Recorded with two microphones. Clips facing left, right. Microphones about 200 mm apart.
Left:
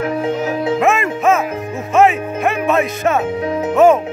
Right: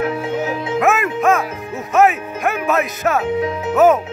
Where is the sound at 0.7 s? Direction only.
Centre (ahead or behind).